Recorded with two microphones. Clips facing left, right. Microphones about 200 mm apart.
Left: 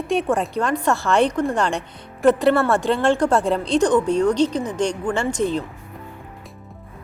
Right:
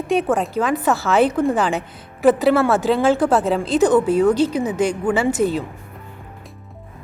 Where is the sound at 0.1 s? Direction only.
Centre (ahead or behind).